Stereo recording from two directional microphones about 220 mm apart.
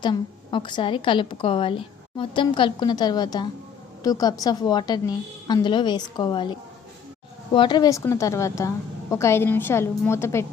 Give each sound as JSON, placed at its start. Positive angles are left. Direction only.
{"t": 0.0, "sound": "a woman's voice", "side_deg": 20}